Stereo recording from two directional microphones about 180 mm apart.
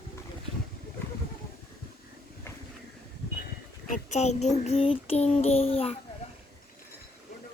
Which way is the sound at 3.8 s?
45° left (ahead or behind).